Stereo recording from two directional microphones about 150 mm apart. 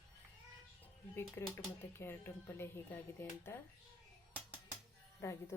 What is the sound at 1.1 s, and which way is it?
Speech, 15° left (ahead or behind).